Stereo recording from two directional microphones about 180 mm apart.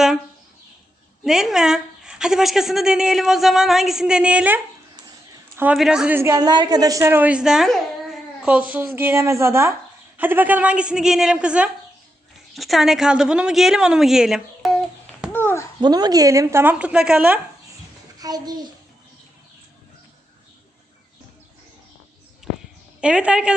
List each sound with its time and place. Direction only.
1.2 s speech: centre (ahead or behind)
4.9 s a sound: 20° right (ahead or behind)
5.6 s a woman's voice: 5° right (ahead or behind)
15.8 s a woman's voice: 20° right (ahead or behind); by 17.4 s 5° right (ahead or behind)
18.2 s a child's voice: 20° right (ahead or behind)
23.0 s speech: 5° right (ahead or behind)